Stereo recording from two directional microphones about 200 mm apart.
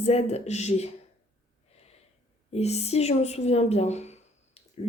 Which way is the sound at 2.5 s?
30° left (ahead or behind).